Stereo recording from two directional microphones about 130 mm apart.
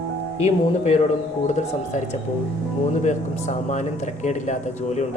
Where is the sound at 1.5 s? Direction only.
65° left (ahead or behind).